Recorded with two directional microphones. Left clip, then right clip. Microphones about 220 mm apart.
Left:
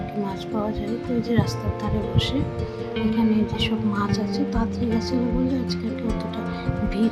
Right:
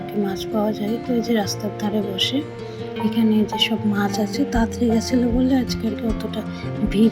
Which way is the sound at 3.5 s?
10° right (ahead or behind).